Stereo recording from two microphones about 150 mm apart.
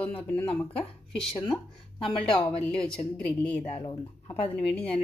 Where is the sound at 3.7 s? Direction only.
35° left (ahead or behind).